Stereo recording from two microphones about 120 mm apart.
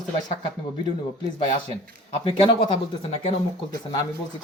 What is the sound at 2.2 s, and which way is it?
Speech, 50° left (ahead or behind).